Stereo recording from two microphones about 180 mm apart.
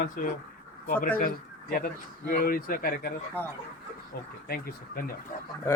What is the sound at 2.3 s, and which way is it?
Speech, 55° left (ahead or behind).